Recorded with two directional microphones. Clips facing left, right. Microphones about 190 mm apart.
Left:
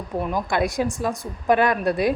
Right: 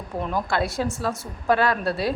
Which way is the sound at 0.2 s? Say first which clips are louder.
Left 2 dB; 10° left (ahead or behind).